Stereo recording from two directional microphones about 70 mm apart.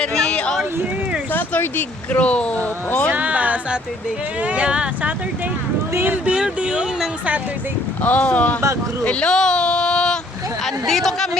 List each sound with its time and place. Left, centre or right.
0.0 s a sound: centre
1.3 s speech: left
3.1 s music: right
4.4 s speech: centre
5.9 s speech: right
6.2 s a sound: centre
8.0 s speech: centre
9.0 s a sound: centre
10.8 s speech: centre